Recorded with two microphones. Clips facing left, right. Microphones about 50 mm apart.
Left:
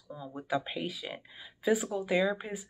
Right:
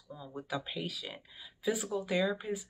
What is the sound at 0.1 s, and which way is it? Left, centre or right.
Speech, centre.